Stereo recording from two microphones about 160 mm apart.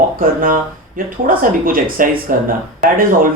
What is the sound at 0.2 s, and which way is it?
Speech, 60° right (ahead or behind).